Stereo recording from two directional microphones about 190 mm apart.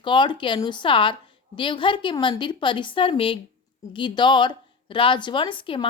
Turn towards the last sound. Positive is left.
turn(degrees=25)  # may be behind; listen again after turning